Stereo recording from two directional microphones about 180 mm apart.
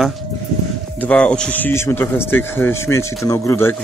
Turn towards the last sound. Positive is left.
turn(degrees=15)  # may be behind; listen again after turning